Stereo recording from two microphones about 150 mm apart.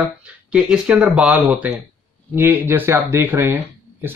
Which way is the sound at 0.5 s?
5° right (ahead or behind).